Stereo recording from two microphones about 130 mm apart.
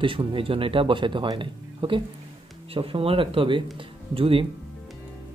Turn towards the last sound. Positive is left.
turn(degrees=-45)  # may be behind; listen again after turning